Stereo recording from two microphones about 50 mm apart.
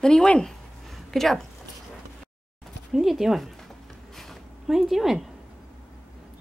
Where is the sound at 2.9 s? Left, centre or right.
Centre.